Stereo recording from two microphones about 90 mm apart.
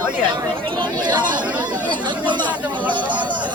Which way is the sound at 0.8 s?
60° right (ahead or behind).